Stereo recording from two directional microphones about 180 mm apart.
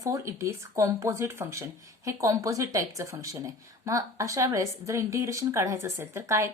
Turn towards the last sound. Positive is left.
turn(degrees=-15)  # may be behind; listen again after turning